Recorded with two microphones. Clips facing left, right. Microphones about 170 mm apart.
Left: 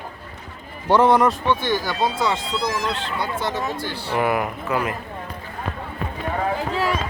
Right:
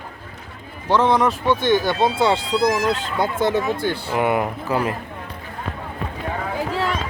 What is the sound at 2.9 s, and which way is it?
Speech, 50° right (ahead or behind).